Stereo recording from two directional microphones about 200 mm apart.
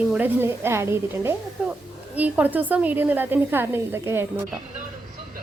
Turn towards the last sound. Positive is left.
turn(degrees=-10)  # may be behind; listen again after turning